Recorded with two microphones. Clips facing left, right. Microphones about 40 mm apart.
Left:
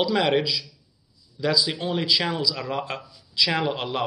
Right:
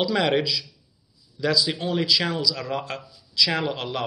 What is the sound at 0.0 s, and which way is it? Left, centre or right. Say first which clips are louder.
A man's voice: even; centre.